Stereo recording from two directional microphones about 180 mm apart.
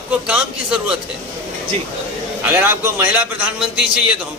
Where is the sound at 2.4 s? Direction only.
10° right (ahead or behind).